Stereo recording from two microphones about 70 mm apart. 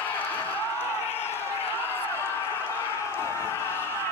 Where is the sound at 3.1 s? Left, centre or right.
Left.